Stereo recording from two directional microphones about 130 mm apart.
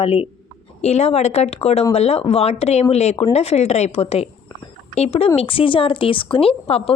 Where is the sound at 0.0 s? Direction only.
45° left (ahead or behind).